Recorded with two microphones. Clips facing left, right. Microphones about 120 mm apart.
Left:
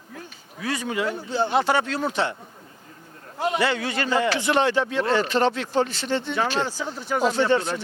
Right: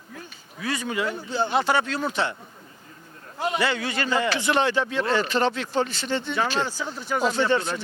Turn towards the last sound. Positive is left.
turn(degrees=45)  # may be behind; listen again after turning